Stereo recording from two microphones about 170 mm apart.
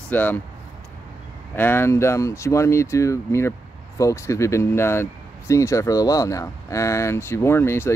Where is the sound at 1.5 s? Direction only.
10° left (ahead or behind).